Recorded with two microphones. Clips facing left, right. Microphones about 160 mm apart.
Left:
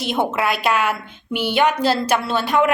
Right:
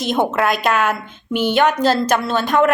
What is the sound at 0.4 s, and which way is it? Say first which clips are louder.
A woman's voice: right 2 dB; 45° right (ahead or behind).